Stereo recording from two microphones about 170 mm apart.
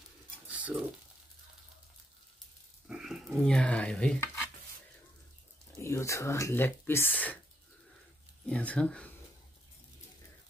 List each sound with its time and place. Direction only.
0.5 s cutlery: 10° right (ahead or behind)
2.9 s speech: 5° right (ahead or behind)
5.8 s speech: 15° left (ahead or behind)
8.5 s speech: 5° left (ahead or behind)